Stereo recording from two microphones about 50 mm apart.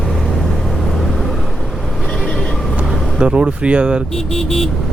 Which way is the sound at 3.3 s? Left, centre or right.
Right.